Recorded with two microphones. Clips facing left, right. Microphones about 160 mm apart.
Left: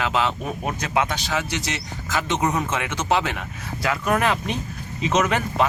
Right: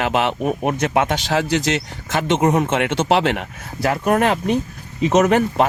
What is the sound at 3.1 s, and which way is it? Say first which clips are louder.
Speech: right 3 dB; 70° right (ahead or behind).